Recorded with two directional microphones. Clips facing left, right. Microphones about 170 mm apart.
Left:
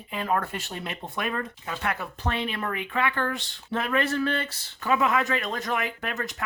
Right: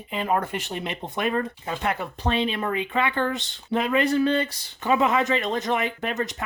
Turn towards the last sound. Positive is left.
turn(degrees=-20)  # may be behind; listen again after turning